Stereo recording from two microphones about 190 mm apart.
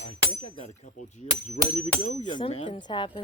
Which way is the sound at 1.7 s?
35° left (ahead or behind).